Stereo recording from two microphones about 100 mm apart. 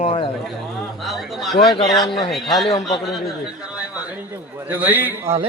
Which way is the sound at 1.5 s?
50° left (ahead or behind).